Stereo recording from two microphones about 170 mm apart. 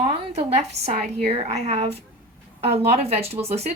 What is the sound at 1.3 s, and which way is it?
Speech, 40° right (ahead or behind).